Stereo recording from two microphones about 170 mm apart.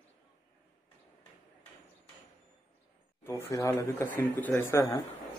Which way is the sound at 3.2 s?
15° left (ahead or behind).